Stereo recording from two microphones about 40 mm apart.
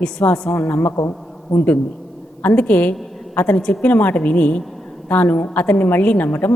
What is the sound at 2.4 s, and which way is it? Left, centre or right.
Speech, left.